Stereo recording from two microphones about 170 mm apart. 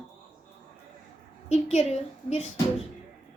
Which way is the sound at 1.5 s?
40° left (ahead or behind).